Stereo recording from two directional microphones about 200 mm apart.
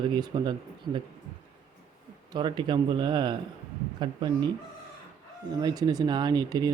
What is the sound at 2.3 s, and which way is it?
Speech, 25° right (ahead or behind).